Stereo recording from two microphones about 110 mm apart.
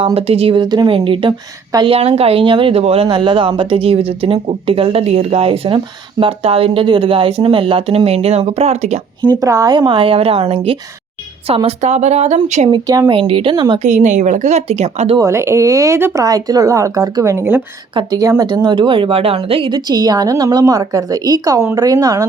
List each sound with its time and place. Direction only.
0.0 s speech: 65° right (ahead or behind)
0.6 s a woman's voice: 40° right (ahead or behind)
0.9 s speech: 55° right (ahead or behind)
1.9 s speech: 65° right (ahead or behind); by 9.0 s 85° right
9.4 s a woman's voice: 30° right (ahead or behind); by 12.6 s 90° right
13.1 s speech: 55° right (ahead or behind)
13.7 s a woman's voice: 90° right
15.2 s speech: 25° right (ahead or behind)
16.2 s a woman's voice: 35° right (ahead or behind)
17.3 s speech: 20° right (ahead or behind)
18.4 s speech: 40° right (ahead or behind)
19.9 s a woman's voice: 35° right (ahead or behind)